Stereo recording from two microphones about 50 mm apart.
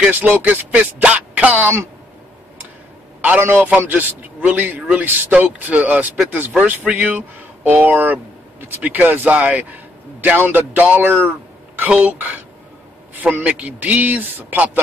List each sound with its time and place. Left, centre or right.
0.1 s a man's voice: right
3.3 s a man's voice: right
5.3 s a man's voice: right
9.3 s speech: right
10.2 s a man's voice: right